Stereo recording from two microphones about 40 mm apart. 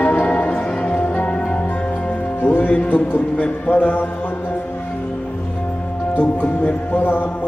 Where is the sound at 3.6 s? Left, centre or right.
Left.